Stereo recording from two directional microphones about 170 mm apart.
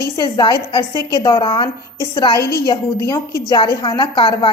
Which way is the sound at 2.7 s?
20° left (ahead or behind).